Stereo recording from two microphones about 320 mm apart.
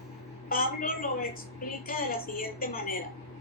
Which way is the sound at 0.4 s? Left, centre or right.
Left.